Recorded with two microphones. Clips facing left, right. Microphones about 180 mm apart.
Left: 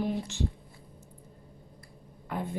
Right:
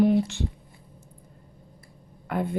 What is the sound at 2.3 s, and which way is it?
Speech, 70° right (ahead or behind).